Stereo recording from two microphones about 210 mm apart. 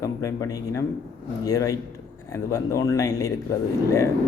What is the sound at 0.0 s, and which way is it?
Speech, 15° left (ahead or behind).